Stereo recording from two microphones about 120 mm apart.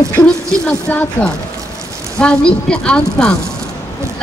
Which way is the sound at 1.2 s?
15° left (ahead or behind).